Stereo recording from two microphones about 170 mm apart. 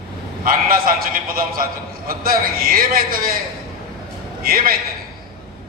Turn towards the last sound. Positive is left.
turn(degrees=-60)  # may be behind; listen again after turning